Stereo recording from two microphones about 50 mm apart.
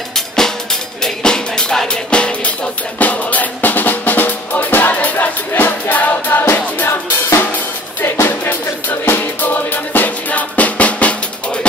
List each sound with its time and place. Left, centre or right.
1.0 s music: centre; by 6.9 s left
6.9 s drum kit: left
8.0 s music: left